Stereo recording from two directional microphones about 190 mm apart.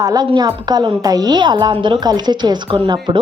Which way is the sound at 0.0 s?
20° right (ahead or behind).